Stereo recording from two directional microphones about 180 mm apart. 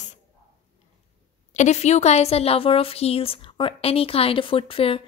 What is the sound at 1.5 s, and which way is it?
A woman's voice, 40° left (ahead or behind).